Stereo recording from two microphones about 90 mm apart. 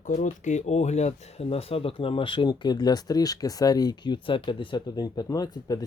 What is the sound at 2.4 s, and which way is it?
Speech, 50° left (ahead or behind).